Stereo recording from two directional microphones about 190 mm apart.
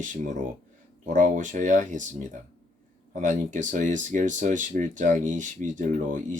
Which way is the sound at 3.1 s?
40° right (ahead or behind).